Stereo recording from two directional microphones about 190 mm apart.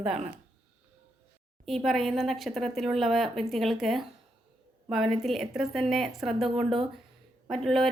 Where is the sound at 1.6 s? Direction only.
Centre (ahead or behind).